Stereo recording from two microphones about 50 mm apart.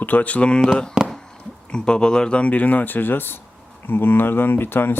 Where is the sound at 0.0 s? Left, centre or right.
Left.